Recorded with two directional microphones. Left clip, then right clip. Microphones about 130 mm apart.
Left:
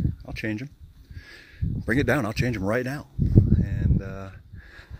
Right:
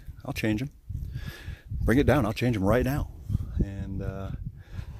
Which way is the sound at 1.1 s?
45° right (ahead or behind).